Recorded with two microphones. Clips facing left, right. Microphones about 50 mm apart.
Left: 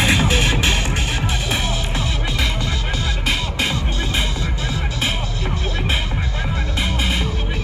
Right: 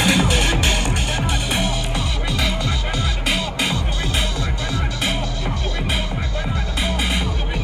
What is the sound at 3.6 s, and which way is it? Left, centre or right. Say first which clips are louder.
Music: even; left.